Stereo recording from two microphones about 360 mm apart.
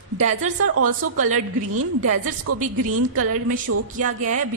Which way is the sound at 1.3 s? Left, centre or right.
Right.